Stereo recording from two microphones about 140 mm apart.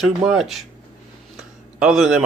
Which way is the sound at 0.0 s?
5° right (ahead or behind).